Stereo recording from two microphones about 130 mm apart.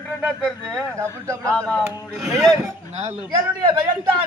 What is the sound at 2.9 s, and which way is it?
Speech, 55° right (ahead or behind).